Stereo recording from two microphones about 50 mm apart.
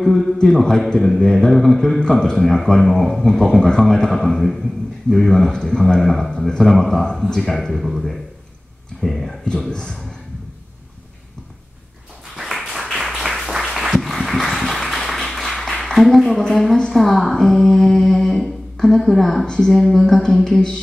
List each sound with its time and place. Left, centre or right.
0.0 s a man's voice: centre
7.8 s a man's voice: centre
9.7 s a man's voice: centre
12.4 s a sound: centre
12.9 s applause: centre
16.4 s a man's voice: centre
19.4 s a man's voice: centre
19.7 s a man's voice: centre